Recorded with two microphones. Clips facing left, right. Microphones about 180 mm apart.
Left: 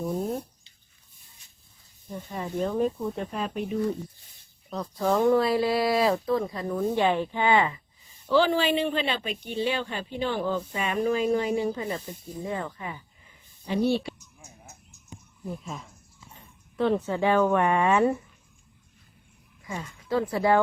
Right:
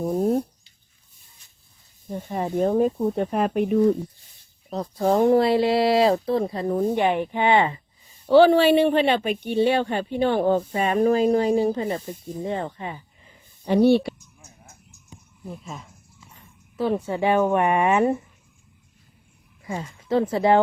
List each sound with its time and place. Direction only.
2.1 s speech: 50° right (ahead or behind)
2.6 s speech: 35° right (ahead or behind)
3.2 s speech: 60° right (ahead or behind)
4.7 s speech: 30° right (ahead or behind)
6.9 s speech: 15° right (ahead or behind)
8.3 s speech: 65° right (ahead or behind)
10.8 s speech: 45° right (ahead or behind)
13.7 s speech: 60° right (ahead or behind)
14.7 s frog: 5° left (ahead or behind)
16.7 s a woman's voice: 5° right (ahead or behind)
19.6 s speech: 30° right (ahead or behind)